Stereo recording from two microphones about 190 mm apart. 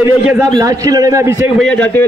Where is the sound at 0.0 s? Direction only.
15° right (ahead or behind).